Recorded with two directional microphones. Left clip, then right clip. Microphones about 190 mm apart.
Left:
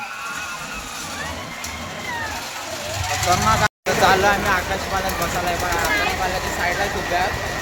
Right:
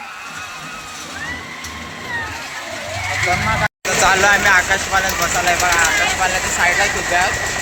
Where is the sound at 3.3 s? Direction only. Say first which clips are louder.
Left 2 dB; 20° left (ahead or behind).